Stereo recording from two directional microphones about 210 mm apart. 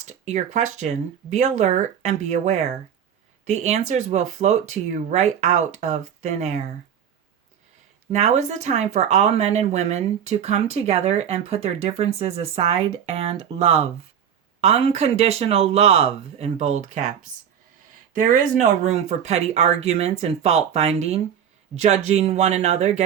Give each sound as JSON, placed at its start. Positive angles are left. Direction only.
{"t": 0.0, "sound": "speech", "side_deg": -35}
{"t": 8.1, "sound": "speech", "side_deg": -35}